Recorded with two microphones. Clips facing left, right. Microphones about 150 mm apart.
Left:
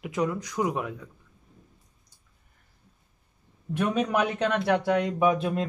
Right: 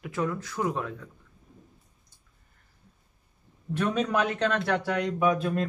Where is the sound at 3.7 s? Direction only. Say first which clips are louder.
Left 1 dB; 15° left (ahead or behind).